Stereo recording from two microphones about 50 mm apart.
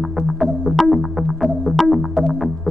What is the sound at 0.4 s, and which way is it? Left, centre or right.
Music, centre.